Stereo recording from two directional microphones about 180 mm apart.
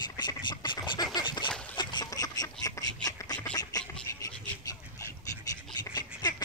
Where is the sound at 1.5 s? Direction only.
5° left (ahead or behind).